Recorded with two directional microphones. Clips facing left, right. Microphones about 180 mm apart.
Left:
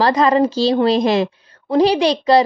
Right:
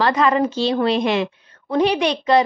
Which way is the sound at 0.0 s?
35° left (ahead or behind).